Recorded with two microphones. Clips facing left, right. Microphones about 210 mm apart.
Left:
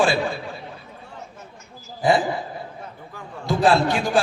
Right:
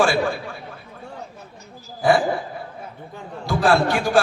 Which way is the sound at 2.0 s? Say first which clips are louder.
Right 1 dB; 20° left (ahead or behind).